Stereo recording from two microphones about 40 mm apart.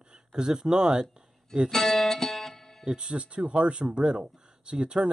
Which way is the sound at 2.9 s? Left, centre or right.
Right.